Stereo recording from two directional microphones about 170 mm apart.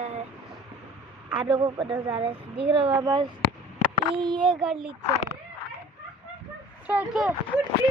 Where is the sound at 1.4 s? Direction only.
25° right (ahead or behind).